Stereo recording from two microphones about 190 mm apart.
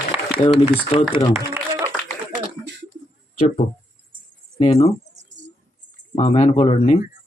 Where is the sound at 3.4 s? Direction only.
35° left (ahead or behind).